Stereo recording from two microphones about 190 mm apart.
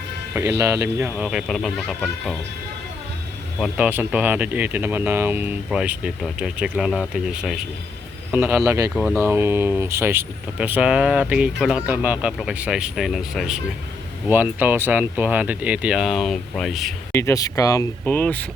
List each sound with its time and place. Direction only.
0.6 s speech: 15° right (ahead or behind)
3.6 s speech: 10° right (ahead or behind)
17.1 s speech: 15° left (ahead or behind)